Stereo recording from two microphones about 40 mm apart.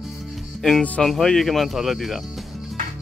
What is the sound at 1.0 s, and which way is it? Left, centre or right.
Speech, centre.